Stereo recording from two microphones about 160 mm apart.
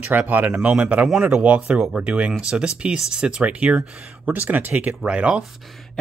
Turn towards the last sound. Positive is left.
turn(degrees=-5)  # may be behind; listen again after turning